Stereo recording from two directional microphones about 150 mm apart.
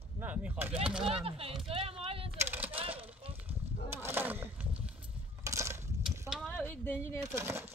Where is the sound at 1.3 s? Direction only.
40° right (ahead or behind).